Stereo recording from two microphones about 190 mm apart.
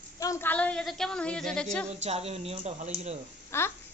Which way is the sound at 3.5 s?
10° left (ahead or behind).